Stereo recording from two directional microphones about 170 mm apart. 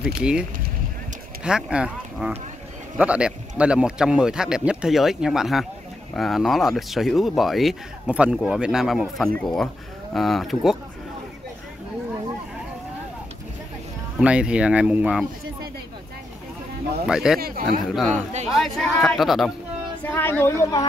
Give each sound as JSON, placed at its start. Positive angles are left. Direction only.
{"t": 0.0, "sound": "speech", "side_deg": -5}
{"t": 14.2, "sound": "speech", "side_deg": -5}
{"t": 17.1, "sound": "speech", "side_deg": -5}
{"t": 17.4, "sound": "speech", "side_deg": -60}
{"t": 17.8, "sound": "speech", "side_deg": 0}
{"t": 18.1, "sound": "speech", "side_deg": -40}
{"t": 18.5, "sound": "speech", "side_deg": 0}
{"t": 20.0, "sound": "speech", "side_deg": 10}